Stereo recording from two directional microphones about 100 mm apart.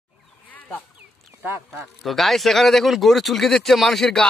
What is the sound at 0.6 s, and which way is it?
Sheep, 15° left (ahead or behind).